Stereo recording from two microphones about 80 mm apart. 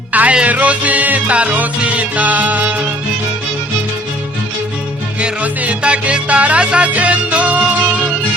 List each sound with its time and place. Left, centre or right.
0.1 s music: centre
5.2 s music: centre